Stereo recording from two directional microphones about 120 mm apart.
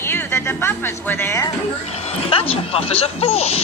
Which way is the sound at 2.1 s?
50° left (ahead or behind).